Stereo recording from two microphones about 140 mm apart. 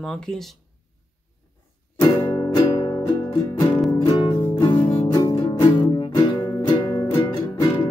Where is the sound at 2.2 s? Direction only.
25° left (ahead or behind).